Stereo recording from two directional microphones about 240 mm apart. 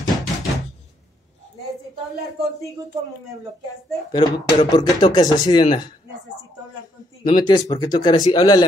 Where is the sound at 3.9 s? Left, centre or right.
Centre.